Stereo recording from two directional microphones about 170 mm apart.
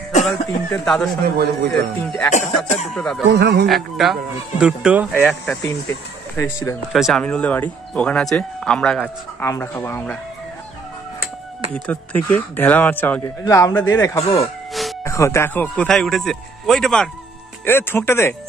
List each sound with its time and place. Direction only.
0.2 s speech: 5° left (ahead or behind)
1.2 s a man's voice: 70° right (ahead or behind)
2.0 s speech: 5° left (ahead or behind)
3.3 s a man's voice: 75° right (ahead or behind)
3.6 s speech: centre (ahead or behind)
6.3 s speech: 15° left (ahead or behind)
6.9 s speech: centre (ahead or behind)
11.7 s speech: 10° left (ahead or behind)
14.7 s a sound: centre (ahead or behind)
15.0 s speech: 15° left (ahead or behind)
17.6 s speech: 15° left (ahead or behind)